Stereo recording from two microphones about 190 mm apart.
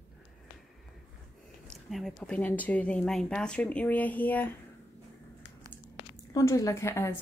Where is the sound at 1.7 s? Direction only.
Centre (ahead or behind).